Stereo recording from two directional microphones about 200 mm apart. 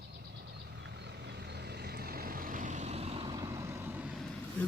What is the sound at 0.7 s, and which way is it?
Vehicle, 60° right (ahead or behind).